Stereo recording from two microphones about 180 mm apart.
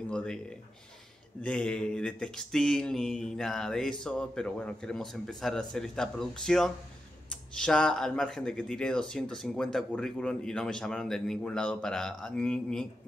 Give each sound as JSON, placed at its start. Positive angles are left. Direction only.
{"t": 0.1, "sound": "speech", "side_deg": 5}